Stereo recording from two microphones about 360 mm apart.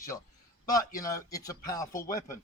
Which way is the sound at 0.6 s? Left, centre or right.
Centre.